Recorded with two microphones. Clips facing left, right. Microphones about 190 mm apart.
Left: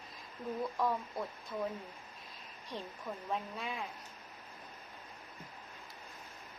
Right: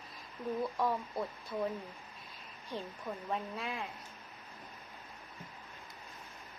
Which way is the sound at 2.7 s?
Centre (ahead or behind).